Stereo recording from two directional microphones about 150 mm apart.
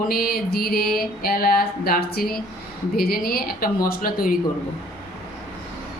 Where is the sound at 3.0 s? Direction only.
85° left.